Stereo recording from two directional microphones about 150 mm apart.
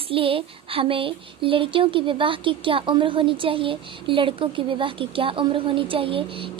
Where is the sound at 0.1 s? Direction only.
35° right (ahead or behind).